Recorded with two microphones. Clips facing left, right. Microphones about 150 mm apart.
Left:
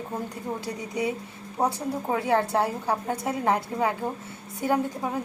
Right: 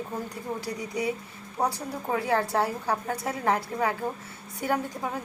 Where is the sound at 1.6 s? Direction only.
25° left (ahead or behind).